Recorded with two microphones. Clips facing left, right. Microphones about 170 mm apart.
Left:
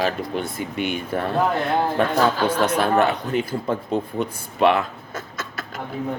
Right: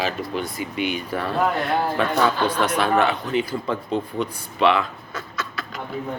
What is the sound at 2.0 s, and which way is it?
A man's voice, 50° left (ahead or behind).